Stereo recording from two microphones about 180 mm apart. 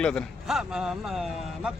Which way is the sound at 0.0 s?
5° left (ahead or behind).